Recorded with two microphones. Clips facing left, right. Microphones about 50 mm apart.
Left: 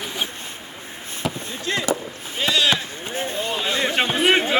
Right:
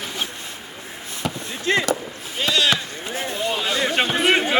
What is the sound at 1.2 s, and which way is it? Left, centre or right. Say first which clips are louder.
Chop: left 1 dB; centre.